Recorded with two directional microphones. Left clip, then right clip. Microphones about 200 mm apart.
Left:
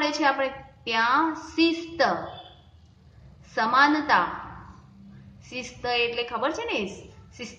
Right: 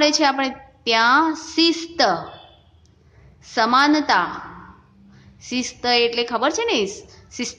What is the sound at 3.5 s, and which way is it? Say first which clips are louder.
Speech: right 4 dB; 50° right (ahead or behind).